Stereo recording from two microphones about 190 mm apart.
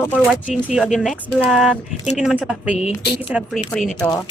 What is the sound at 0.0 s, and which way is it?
Speech, 10° left (ahead or behind).